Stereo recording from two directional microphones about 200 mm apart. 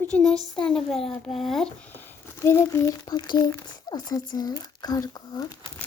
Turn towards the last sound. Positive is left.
turn(degrees=20)  # may be behind; listen again after turning